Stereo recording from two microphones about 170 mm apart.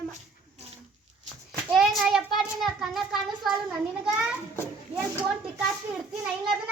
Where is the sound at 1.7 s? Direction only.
Centre (ahead or behind).